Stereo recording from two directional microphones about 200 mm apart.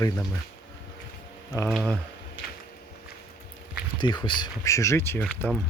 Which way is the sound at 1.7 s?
Centre (ahead or behind).